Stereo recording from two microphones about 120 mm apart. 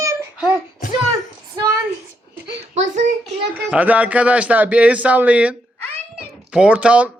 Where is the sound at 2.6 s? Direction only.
80° right.